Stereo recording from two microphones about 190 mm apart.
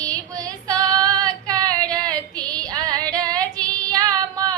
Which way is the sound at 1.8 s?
20° right (ahead or behind).